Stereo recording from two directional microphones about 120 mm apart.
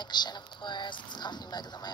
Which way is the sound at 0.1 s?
35° left (ahead or behind).